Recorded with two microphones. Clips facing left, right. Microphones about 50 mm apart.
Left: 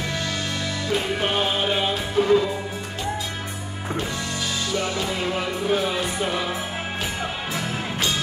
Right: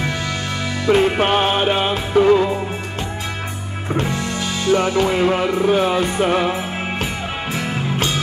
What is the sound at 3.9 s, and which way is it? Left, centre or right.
Music, right.